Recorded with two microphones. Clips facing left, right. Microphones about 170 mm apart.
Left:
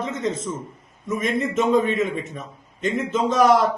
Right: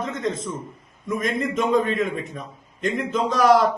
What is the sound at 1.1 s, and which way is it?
A man's voice, 5° left (ahead or behind).